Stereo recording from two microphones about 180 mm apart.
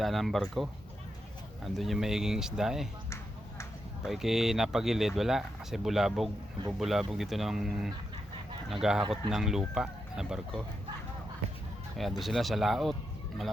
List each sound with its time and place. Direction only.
0.0 s speech: centre (ahead or behind)
4.0 s speech: centre (ahead or behind)
11.9 s speech: centre (ahead or behind)